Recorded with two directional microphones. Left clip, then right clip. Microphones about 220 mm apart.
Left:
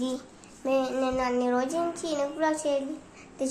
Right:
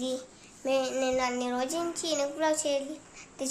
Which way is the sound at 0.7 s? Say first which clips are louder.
Left 1 dB; 15° right (ahead or behind).